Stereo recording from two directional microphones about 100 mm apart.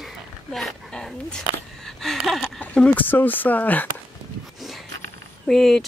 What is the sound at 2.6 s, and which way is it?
Speech, 15° left (ahead or behind).